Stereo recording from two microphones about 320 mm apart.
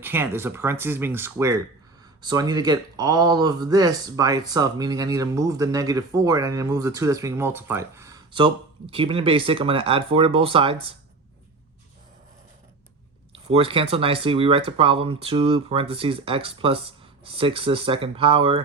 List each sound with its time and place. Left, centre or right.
0.0 s speech: centre
13.3 s speech: centre